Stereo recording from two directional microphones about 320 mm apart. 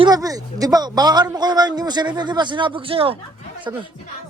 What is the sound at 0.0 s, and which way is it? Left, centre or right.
A man's voice, centre.